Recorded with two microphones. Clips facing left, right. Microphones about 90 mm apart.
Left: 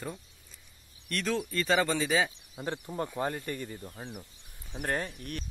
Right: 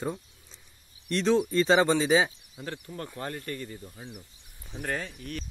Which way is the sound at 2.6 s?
20° left (ahead or behind).